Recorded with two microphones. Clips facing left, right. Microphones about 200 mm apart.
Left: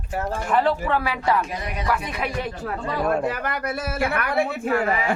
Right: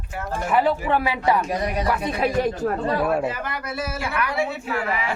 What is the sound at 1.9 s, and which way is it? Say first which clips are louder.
Speech: even; 25° right (ahead or behind).